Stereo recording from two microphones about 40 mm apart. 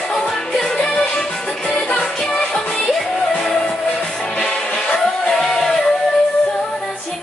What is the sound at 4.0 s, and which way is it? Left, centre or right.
Music, left.